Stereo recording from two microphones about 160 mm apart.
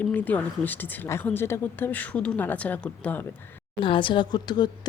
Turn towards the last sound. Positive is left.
turn(degrees=25)  # may be behind; listen again after turning